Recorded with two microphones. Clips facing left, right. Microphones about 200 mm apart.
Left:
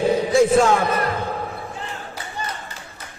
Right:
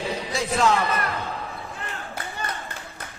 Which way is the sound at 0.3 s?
50° left (ahead or behind).